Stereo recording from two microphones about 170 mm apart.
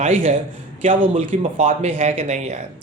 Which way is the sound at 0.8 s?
45° right (ahead or behind).